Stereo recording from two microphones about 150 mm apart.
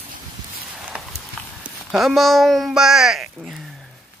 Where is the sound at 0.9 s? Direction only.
5° right (ahead or behind).